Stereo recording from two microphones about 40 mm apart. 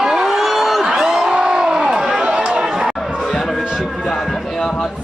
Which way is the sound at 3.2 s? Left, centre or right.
Centre.